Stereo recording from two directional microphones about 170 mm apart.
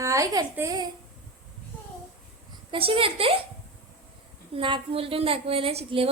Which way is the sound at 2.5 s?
30° right (ahead or behind).